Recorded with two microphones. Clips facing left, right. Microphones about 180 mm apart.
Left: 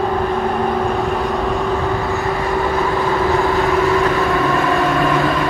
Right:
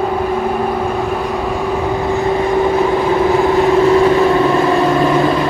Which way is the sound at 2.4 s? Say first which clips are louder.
Right 6 dB; 20° right (ahead or behind).